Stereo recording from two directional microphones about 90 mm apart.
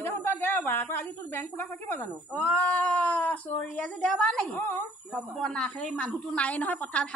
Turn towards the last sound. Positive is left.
turn(degrees=15)  # may be behind; listen again after turning